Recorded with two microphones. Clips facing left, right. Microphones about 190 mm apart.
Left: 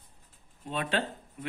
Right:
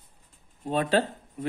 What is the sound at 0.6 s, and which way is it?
Speech, 40° right (ahead or behind).